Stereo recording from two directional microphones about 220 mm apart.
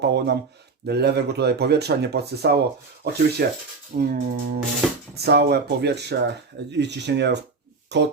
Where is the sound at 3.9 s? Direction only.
40° right (ahead or behind).